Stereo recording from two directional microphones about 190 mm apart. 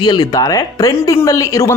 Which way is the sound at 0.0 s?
20° left (ahead or behind).